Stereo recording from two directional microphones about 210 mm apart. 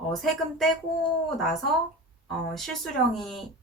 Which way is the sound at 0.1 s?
Centre (ahead or behind).